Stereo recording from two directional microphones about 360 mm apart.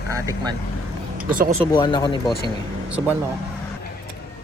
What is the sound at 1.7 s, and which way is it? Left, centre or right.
Speech, centre.